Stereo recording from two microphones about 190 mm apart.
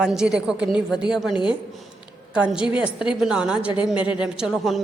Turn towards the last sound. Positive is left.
turn(degrees=0)  # may be behind; listen again after turning